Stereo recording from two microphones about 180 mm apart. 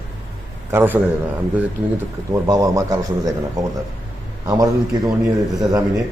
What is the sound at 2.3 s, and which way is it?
A man's voice, 20° right (ahead or behind).